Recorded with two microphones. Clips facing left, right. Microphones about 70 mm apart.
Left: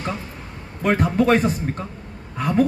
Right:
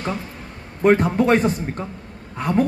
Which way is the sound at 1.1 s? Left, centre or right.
Centre.